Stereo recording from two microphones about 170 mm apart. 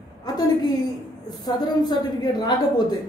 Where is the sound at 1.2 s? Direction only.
25° left (ahead or behind).